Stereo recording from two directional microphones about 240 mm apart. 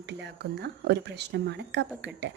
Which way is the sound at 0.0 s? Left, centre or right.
Right.